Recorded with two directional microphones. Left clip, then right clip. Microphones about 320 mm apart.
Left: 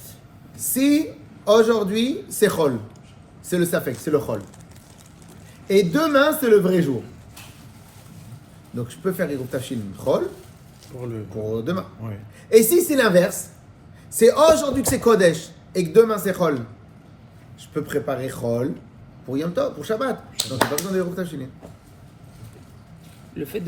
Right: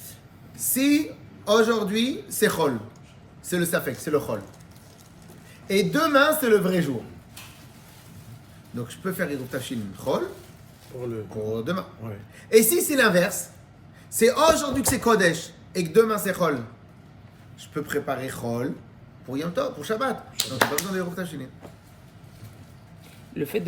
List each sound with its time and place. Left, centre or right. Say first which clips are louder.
0.5 s a woman's voice: left 3 dB; centre
5.6 s a man's voice: left 4 dB; centre
8.7 s a man's voice: left 5 dB; centre
11.4 s a man's voice: left 3 dB; centre
17.6 s a man's voice: left 3 dB; centre
23.4 s speech: right 2 dB; right